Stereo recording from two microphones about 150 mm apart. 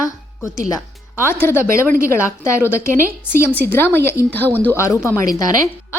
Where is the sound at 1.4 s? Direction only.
15° left (ahead or behind).